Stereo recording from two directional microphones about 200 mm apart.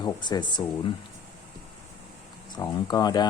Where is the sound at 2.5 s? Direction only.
20° left (ahead or behind).